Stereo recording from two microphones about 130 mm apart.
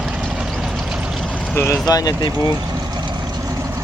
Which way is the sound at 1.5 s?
20° left (ahead or behind).